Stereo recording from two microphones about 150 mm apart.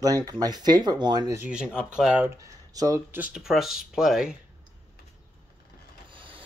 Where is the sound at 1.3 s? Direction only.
10° right (ahead or behind).